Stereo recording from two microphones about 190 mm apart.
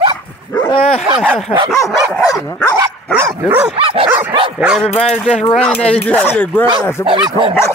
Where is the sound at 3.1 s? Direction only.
15° right (ahead or behind).